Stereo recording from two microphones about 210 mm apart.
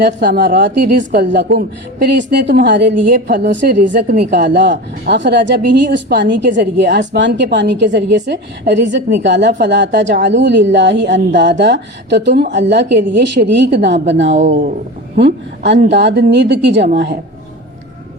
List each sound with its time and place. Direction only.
0.0 s a woman's voice: 55° right (ahead or behind)
14.3 s speech: 35° right (ahead or behind)
15.1 s a woman's voice: 55° right (ahead or behind)